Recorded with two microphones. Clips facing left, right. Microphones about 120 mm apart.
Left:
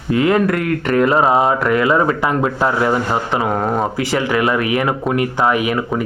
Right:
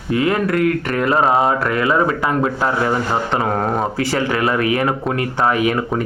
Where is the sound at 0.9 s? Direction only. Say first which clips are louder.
Left 3 dB; 25° left (ahead or behind); by 3.8 s 5° left (ahead or behind).